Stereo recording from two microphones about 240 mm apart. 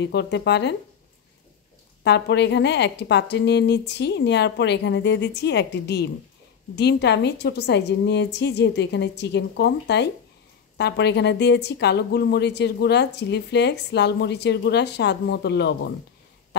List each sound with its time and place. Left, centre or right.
0.0 s a woman's voice: left
2.0 s a woman's voice: left